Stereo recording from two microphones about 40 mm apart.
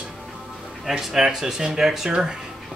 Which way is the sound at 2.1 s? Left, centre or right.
Centre.